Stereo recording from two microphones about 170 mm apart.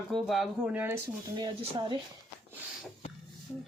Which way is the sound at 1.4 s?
30° right (ahead or behind).